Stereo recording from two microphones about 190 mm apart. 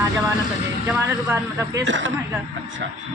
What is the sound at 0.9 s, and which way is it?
Speech, 10° right (ahead or behind).